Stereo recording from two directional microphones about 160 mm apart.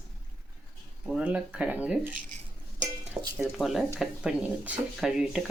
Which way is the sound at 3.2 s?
20° right (ahead or behind).